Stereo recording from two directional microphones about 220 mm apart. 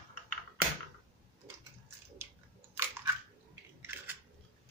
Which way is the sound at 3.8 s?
10° right (ahead or behind).